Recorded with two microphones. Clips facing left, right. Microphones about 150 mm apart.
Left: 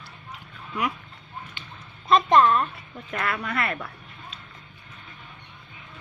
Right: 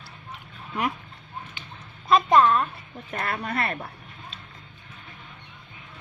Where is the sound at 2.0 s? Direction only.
5° right (ahead or behind).